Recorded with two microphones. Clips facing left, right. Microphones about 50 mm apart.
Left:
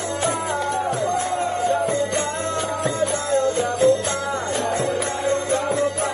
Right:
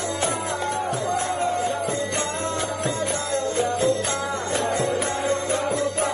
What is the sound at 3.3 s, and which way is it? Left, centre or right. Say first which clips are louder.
Music: left 3 dB; left.